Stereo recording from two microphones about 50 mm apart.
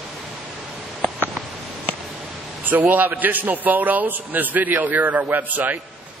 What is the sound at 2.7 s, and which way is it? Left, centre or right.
A man's voice, right.